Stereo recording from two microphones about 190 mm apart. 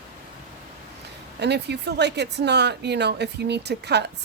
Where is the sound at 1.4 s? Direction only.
60° right (ahead or behind).